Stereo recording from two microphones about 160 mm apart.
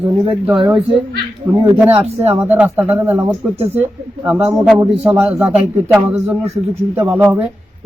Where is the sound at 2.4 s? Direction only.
10° right (ahead or behind).